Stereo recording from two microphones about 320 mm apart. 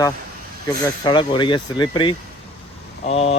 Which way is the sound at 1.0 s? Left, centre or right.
Centre.